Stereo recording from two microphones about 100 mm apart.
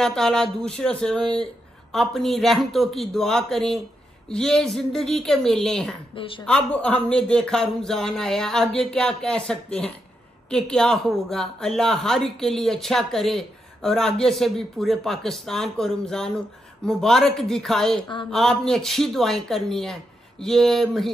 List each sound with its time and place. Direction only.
0.0 s a man's voice: 5° left (ahead or behind)
6.1 s a woman's voice: 60° left (ahead or behind)
6.4 s a man's voice: 10° left (ahead or behind)